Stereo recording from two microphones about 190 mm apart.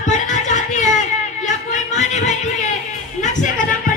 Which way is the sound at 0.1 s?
40° left (ahead or behind).